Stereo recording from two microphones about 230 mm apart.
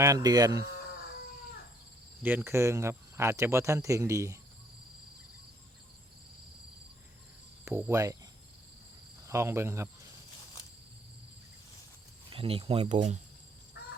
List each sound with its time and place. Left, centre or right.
0.0 s speech: centre
2.2 s speech: centre
7.6 s speech: centre
9.2 s speech: centre
12.3 s speech: right
13.8 s crow: left